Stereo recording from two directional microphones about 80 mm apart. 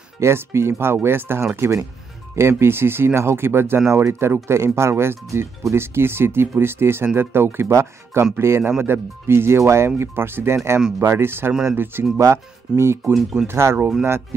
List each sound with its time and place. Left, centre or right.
0.2 s speech: right
12.2 s speech: right
13.1 s speech: centre
13.5 s speech: right